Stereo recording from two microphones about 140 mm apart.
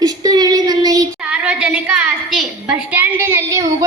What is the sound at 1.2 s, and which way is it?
A woman's voice, 10° right (ahead or behind).